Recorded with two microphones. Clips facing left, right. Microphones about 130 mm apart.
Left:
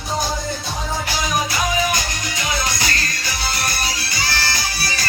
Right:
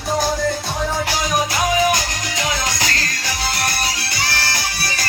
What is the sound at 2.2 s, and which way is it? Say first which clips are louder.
Music: right 1 dB; 90° right.